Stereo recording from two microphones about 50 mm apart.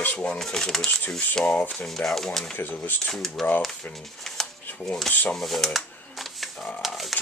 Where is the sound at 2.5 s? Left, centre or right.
Left.